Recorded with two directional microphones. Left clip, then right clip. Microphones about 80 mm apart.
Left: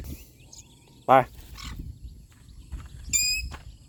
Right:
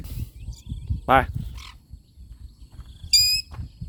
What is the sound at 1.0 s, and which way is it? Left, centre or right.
Speech, right.